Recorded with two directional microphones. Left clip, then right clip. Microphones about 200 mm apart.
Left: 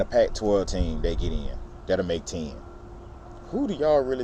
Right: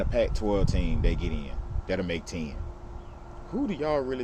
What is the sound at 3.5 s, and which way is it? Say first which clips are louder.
Speech: left 6 dB; centre (ahead or behind).